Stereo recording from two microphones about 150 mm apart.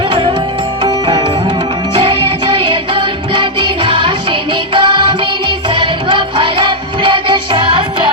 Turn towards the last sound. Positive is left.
turn(degrees=-35)  # may be behind; listen again after turning